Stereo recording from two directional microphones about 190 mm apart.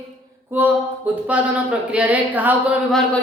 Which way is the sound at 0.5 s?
10° right (ahead or behind).